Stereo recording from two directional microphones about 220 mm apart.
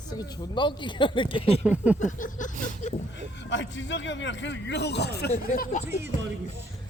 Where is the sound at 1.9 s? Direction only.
35° left (ahead or behind).